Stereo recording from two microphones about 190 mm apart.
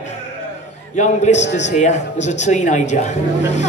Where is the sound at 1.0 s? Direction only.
35° left (ahead or behind).